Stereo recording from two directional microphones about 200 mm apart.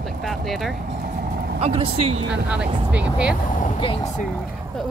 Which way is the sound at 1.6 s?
30° right (ahead or behind).